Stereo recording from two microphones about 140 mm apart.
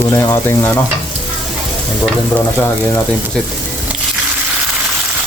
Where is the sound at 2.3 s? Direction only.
15° left (ahead or behind).